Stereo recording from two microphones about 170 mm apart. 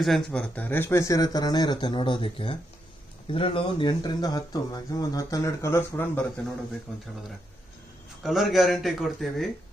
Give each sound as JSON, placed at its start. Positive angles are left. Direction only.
{"t": 0.0, "sound": "speech", "side_deg": 5}
{"t": 8.2, "sound": "speech", "side_deg": 0}